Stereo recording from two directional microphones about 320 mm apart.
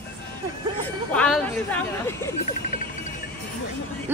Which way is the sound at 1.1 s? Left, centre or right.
Centre.